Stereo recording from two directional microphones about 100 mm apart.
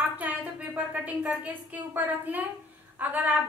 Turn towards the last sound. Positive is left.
turn(degrees=-15)  # may be behind; listen again after turning